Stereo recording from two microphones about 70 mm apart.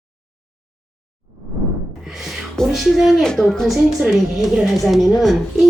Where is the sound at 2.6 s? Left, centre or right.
Centre.